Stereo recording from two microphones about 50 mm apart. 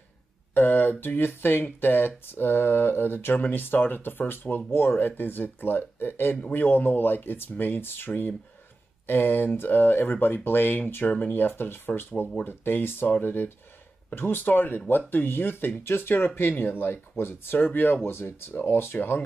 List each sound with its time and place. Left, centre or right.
0.6 s speech: left
4.6 s speech: left
8.1 s speech: left
9.0 s speech: left
11.1 s speech: left
17.2 s speech: left
17.6 s speech: left